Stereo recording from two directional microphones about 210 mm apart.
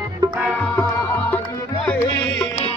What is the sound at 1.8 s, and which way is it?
Music, 5° left (ahead or behind).